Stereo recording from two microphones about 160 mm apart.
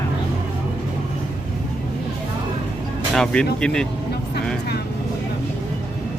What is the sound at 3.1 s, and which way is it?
Speech, 5° left (ahead or behind).